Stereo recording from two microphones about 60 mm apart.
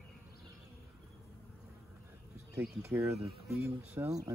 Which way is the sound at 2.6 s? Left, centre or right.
Right.